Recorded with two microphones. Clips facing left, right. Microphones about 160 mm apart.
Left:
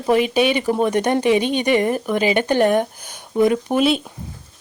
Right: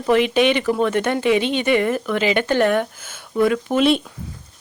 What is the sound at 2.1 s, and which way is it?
Speech, 15° left (ahead or behind).